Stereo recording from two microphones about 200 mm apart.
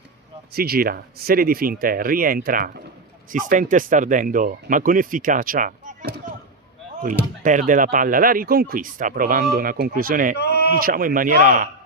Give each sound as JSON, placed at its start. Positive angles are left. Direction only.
{"t": 0.5, "sound": "speech", "side_deg": -50}
{"t": 7.4, "sound": "speech", "side_deg": -40}
{"t": 10.3, "sound": "a sound", "side_deg": 55}
{"t": 10.7, "sound": "speech", "side_deg": -45}